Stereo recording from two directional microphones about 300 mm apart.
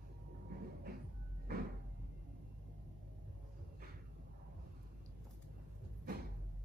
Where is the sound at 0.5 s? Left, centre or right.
Right.